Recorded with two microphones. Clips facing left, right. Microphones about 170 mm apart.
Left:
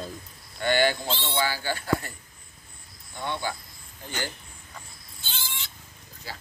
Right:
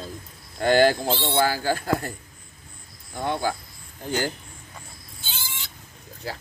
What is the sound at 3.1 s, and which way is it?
Speech, 40° right (ahead or behind).